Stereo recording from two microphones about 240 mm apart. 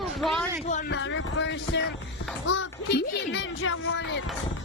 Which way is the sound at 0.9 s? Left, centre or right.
Left.